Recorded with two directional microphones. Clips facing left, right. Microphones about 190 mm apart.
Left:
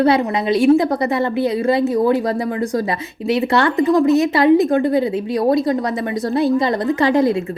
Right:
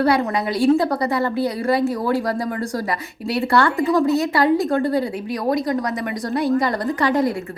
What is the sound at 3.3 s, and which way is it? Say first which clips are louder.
A woman's voice: left 2 dB; 20° left (ahead or behind).